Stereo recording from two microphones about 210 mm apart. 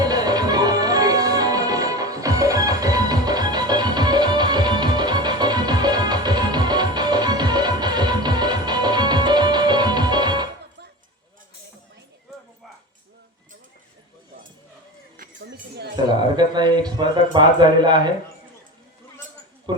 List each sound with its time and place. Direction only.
0.0 s music: 20° right (ahead or behind)
15.2 s a sound: 50° right (ahead or behind)
16.3 s speech: 20° right (ahead or behind)